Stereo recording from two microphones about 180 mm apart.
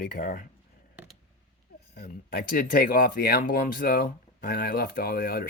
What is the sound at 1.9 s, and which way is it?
Speech, 60° left (ahead or behind).